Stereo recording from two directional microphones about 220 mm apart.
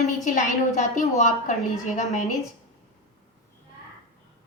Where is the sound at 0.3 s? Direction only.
35° left (ahead or behind).